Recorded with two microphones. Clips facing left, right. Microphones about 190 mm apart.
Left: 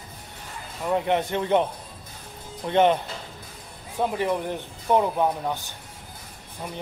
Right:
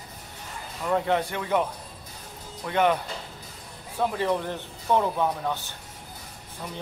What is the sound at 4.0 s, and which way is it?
Speech, 15° left (ahead or behind).